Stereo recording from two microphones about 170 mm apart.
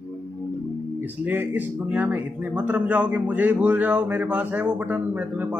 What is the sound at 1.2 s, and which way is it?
A man's voice, 10° right (ahead or behind).